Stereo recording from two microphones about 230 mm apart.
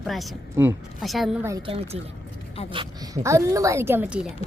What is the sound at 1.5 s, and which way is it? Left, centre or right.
A woman's voice, right.